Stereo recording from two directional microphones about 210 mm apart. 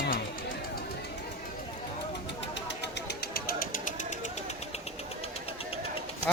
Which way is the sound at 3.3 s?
45° left (ahead or behind).